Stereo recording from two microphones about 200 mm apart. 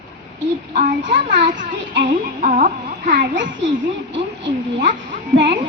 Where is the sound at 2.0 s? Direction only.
40° right (ahead or behind).